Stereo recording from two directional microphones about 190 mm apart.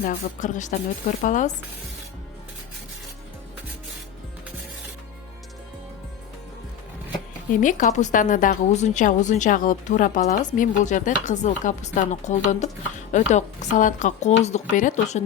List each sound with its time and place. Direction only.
0.0 s a woman's voice: 45° left (ahead or behind)
7.5 s a woman's voice: 45° left (ahead or behind)